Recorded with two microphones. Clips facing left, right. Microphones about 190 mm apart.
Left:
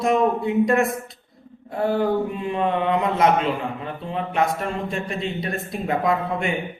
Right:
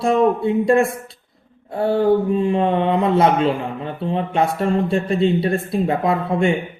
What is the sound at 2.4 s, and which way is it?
Speech, 30° right (ahead or behind).